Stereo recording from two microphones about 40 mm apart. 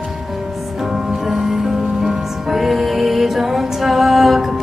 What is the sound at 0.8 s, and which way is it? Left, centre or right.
Music, centre.